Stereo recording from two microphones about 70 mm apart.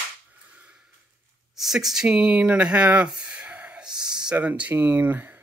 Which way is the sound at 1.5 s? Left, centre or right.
Centre.